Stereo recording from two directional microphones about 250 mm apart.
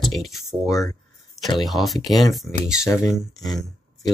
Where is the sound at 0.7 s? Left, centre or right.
Centre.